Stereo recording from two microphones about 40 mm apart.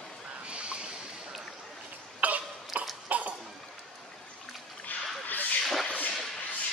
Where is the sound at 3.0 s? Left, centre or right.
Right.